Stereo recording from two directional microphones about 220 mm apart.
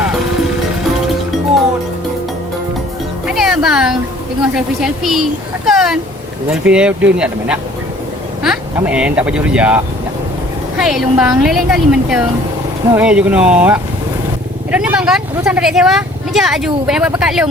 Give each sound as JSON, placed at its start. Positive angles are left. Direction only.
{"t": 3.2, "sound": "music", "side_deg": 0}
{"t": 4.5, "sound": "speech", "side_deg": 0}
{"t": 5.6, "sound": "a sound", "side_deg": 0}
{"t": 6.5, "sound": "speech", "side_deg": -5}